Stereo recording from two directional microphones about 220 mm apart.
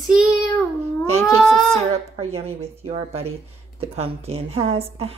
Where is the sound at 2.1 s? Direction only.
30° right (ahead or behind).